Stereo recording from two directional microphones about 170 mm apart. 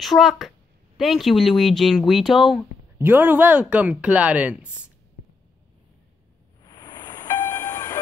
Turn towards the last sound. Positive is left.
turn(degrees=20)  # may be behind; listen again after turning